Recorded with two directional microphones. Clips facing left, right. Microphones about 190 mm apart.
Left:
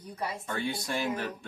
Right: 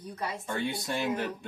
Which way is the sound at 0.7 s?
20° right (ahead or behind).